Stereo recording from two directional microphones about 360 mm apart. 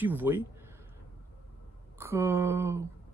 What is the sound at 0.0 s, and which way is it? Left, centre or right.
Speech, centre.